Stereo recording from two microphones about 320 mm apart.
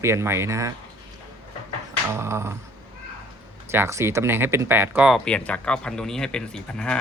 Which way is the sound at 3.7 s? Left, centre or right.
Centre.